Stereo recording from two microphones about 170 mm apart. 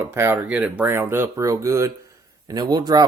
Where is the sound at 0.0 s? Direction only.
15° right (ahead or behind).